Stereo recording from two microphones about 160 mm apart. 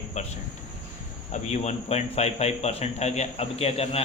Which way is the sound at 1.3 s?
45° left (ahead or behind).